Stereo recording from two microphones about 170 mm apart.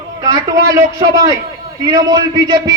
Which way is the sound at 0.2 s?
25° right (ahead or behind).